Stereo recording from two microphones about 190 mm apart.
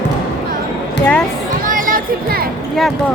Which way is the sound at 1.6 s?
45° right (ahead or behind).